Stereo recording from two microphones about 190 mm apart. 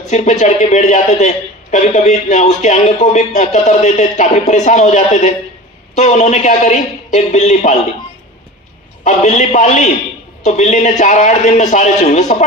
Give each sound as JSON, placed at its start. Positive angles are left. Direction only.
{"t": 0.1, "sound": "a man's voice", "side_deg": 40}
{"t": 9.0, "sound": "a man's voice", "side_deg": 40}